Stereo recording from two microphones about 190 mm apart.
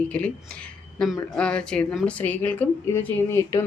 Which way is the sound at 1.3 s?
5° left (ahead or behind).